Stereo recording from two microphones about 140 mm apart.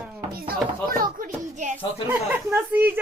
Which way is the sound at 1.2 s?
60° right (ahead or behind).